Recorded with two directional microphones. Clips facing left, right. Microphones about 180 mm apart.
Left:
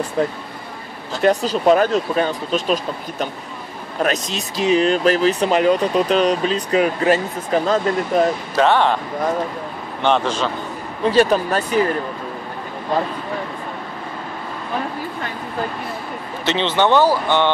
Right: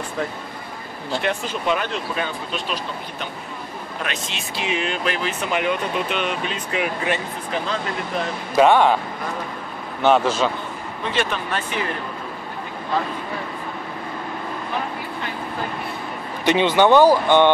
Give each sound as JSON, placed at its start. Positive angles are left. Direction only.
{"t": 0.2, "sound": "speech", "side_deg": 35}
{"t": 8.5, "sound": "speech", "side_deg": -10}
{"t": 10.0, "sound": "speech", "side_deg": -5}
{"t": 11.1, "sound": "speech", "side_deg": 40}
{"t": 16.4, "sound": "speech", "side_deg": -10}